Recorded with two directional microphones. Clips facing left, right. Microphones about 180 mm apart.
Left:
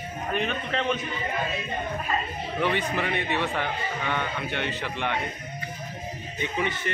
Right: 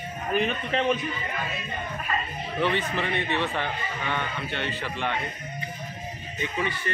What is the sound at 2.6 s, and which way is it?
A man's voice, 15° left (ahead or behind).